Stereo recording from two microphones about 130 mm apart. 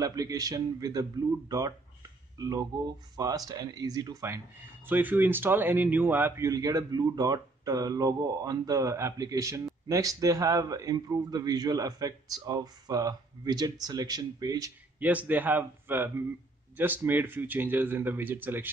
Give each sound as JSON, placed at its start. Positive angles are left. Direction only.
{"t": 0.0, "sound": "a man's voice", "side_deg": -25}
{"t": 4.8, "sound": "a man's voice", "side_deg": -15}
{"t": 15.0, "sound": "speech", "side_deg": -10}